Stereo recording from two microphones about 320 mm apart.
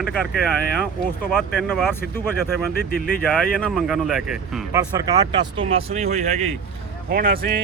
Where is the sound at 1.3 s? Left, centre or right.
Centre.